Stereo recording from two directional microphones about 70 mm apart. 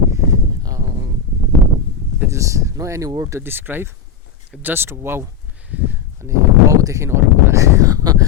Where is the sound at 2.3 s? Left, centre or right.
Right.